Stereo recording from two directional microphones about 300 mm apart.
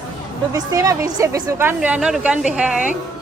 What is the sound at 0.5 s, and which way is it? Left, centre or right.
A woman's voice, centre.